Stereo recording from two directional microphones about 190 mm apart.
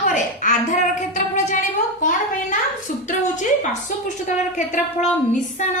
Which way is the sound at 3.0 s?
40° left (ahead or behind).